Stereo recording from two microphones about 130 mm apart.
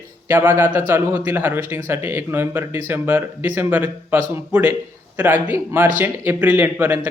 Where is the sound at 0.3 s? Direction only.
15° right (ahead or behind).